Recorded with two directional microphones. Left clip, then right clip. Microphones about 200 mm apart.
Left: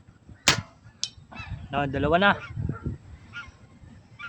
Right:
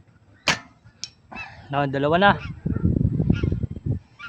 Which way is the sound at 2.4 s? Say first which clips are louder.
Right 5 dB; 50° right (ahead or behind).